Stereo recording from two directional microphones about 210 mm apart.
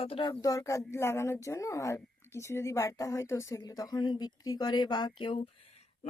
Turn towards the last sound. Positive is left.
turn(degrees=25)  # may be behind; listen again after turning